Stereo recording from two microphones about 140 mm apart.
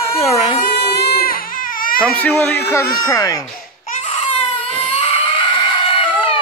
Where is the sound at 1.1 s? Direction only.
90° left.